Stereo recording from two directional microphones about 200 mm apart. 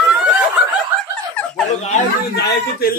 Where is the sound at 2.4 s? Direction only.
55° left (ahead or behind).